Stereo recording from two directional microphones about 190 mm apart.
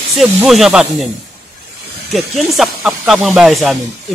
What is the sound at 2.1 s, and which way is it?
Speech, centre (ahead or behind).